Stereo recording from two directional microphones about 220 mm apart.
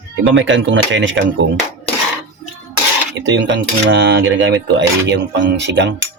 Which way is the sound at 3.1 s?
55° right (ahead or behind).